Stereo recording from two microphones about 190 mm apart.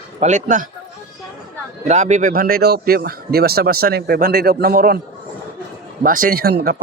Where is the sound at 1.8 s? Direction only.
40° right (ahead or behind).